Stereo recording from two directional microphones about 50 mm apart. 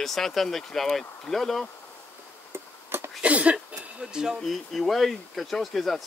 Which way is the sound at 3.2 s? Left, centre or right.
Right.